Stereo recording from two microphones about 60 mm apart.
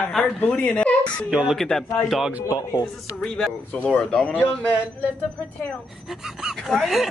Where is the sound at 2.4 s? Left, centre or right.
Left.